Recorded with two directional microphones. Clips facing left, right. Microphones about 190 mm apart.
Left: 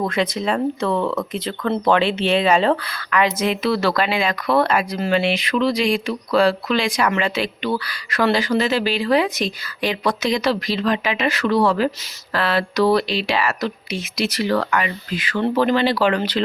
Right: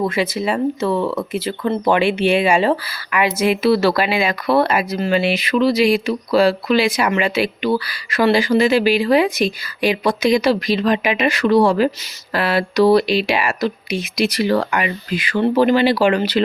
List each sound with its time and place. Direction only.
0.0 s speech: 5° right (ahead or behind)